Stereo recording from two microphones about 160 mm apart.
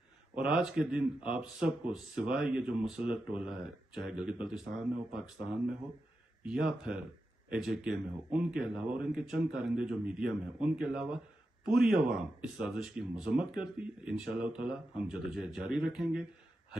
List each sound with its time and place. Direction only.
0.3 s speech: 5° right (ahead or behind)
6.4 s a man's voice: 5° right (ahead or behind)